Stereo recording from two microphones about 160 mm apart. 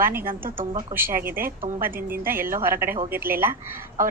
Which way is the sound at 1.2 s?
15° right (ahead or behind).